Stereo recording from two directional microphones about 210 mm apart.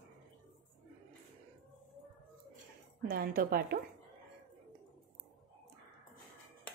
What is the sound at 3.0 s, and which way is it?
Speech, 45° right (ahead or behind).